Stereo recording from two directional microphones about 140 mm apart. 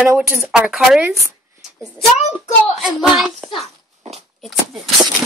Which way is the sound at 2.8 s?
Centre (ahead or behind).